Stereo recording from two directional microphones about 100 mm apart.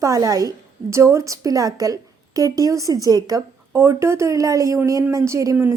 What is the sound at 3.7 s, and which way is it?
Speech, 25° right (ahead or behind).